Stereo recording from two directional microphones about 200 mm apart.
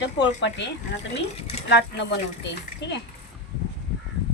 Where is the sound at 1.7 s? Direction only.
60° left (ahead or behind).